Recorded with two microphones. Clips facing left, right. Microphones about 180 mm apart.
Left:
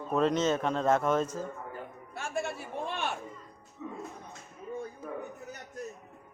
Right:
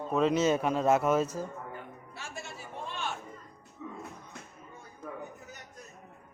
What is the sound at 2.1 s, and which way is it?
Speech, 55° left (ahead or behind).